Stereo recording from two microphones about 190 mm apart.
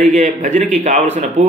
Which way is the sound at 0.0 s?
40° right (ahead or behind).